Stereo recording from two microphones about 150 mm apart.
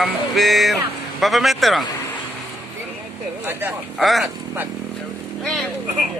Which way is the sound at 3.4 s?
15° right (ahead or behind).